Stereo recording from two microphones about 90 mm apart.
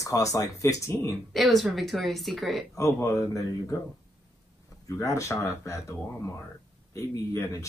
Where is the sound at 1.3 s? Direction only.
Centre (ahead or behind).